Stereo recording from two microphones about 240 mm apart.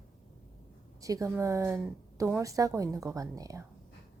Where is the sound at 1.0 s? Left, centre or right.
Centre.